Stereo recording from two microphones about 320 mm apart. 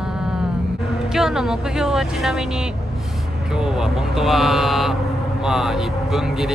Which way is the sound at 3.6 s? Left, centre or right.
Centre.